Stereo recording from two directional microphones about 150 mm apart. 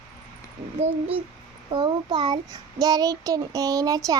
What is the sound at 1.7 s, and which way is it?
A child's voice, 30° right (ahead or behind).